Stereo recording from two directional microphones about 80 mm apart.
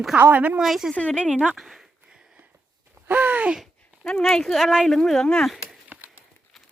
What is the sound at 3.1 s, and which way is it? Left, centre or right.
Gasp, right.